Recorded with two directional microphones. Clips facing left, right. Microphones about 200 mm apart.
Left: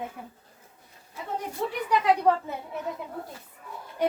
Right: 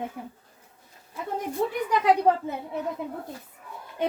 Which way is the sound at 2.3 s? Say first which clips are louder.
Right 1 dB; 30° right (ahead or behind).